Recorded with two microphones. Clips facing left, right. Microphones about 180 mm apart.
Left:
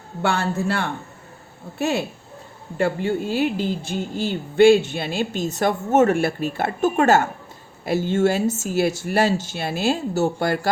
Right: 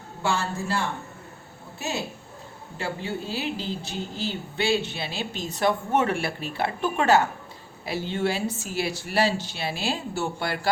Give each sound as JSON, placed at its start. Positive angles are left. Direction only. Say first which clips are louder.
{"t": 0.2, "sound": "speech", "louder": "left 5 dB", "side_deg": 65}